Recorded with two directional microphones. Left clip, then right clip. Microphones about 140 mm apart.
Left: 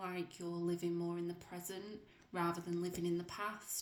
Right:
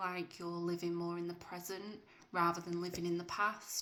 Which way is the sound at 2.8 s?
10° left (ahead or behind).